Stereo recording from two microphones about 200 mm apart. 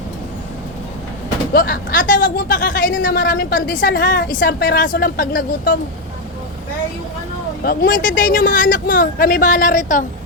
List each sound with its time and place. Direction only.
1.5 s a woman's voice: 45° left (ahead or behind)
7.6 s a woman's voice: 50° left (ahead or behind)